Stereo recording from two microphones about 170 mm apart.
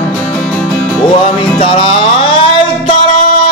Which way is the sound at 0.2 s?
5° left (ahead or behind).